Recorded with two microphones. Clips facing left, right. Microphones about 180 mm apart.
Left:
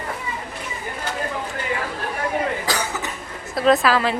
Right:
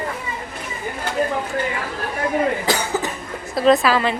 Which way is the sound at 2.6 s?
25° right (ahead or behind).